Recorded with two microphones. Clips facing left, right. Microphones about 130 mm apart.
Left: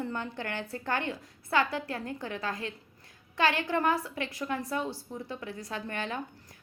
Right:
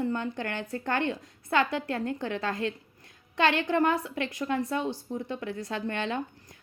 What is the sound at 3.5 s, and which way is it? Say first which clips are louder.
Speech: right 3 dB; 50° right (ahead or behind).